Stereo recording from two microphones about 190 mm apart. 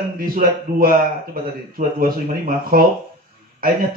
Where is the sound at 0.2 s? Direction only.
50° right (ahead or behind).